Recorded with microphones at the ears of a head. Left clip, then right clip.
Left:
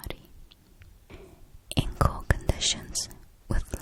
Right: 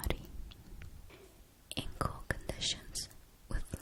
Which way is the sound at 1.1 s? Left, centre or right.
Left.